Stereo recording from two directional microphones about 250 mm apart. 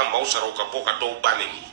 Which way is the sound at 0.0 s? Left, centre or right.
Right.